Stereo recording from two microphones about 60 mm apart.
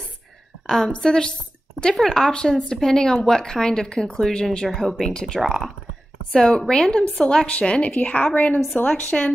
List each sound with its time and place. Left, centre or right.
0.7 s a woman's voice: centre